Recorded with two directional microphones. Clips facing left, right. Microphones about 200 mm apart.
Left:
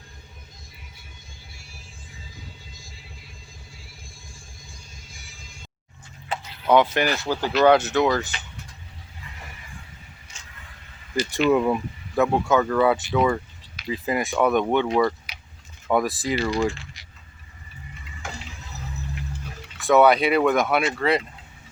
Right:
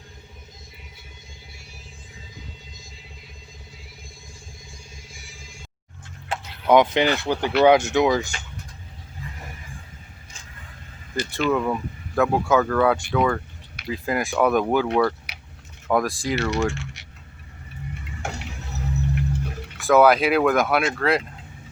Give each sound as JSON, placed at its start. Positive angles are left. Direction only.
{"t": 2.7, "sound": "music", "side_deg": -20}
{"t": 4.9, "sound": "music", "side_deg": -25}
{"t": 6.7, "sound": "speech", "side_deg": -15}
{"t": 11.1, "sound": "speech", "side_deg": 15}
{"t": 12.1, "sound": "speech", "side_deg": 0}
{"t": 15.3, "sound": "keys jangling", "side_deg": -70}
{"t": 15.9, "sound": "speech", "side_deg": 0}
{"t": 17.9, "sound": "water", "side_deg": -65}
{"t": 19.8, "sound": "speech", "side_deg": 0}